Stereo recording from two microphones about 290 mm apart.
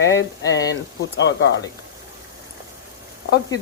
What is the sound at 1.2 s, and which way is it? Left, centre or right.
Speech, left.